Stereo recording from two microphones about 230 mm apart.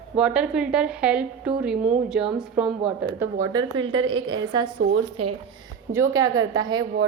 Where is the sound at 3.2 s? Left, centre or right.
Centre.